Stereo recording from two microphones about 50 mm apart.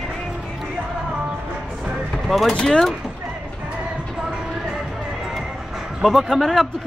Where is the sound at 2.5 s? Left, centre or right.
Centre.